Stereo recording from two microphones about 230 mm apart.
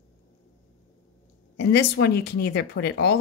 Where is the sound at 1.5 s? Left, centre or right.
Left.